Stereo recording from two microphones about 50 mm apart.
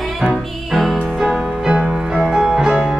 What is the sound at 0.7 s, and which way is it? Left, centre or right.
Music, centre.